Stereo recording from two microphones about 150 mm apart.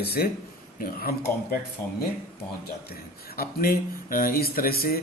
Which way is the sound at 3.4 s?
75° left (ahead or behind).